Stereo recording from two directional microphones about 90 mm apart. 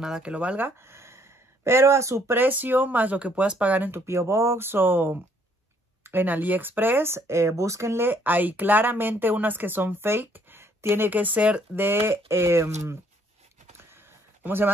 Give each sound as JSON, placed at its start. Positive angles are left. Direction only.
{"t": 0.0, "sound": "speech", "side_deg": -10}
{"t": 4.0, "sound": "speech", "side_deg": -30}
{"t": 13.7, "sound": "a sound", "side_deg": -25}